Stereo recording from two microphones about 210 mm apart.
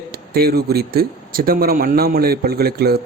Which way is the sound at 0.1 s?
50° right (ahead or behind).